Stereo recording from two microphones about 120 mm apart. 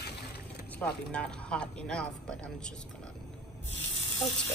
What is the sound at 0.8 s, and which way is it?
Speech, 10° left (ahead or behind).